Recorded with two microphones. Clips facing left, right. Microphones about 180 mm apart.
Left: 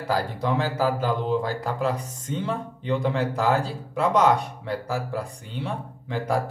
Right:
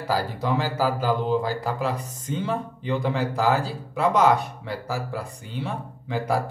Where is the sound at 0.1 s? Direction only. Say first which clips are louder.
Even; 5° right (ahead or behind).